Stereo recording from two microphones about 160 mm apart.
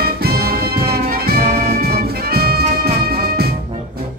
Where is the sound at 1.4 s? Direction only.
40° right (ahead or behind).